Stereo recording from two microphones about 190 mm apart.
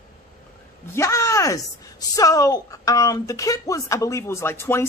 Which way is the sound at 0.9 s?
15° left (ahead or behind).